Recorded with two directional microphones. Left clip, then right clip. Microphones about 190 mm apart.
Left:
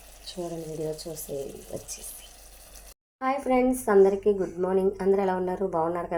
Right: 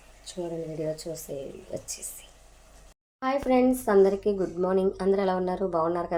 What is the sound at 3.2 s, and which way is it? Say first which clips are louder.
Speech: right 1 dB; 5° right (ahead or behind).